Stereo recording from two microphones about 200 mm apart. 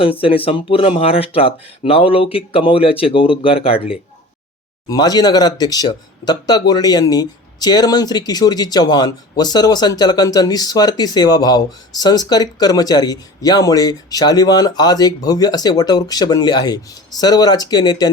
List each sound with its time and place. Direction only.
0.0 s speech: 25° left (ahead or behind)
4.9 s speech: 20° left (ahead or behind)